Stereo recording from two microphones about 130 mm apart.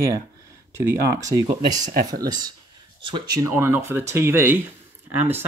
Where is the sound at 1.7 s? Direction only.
70° right (ahead or behind).